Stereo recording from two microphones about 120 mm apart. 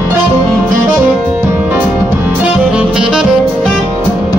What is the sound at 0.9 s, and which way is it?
Music, 10° right (ahead or behind).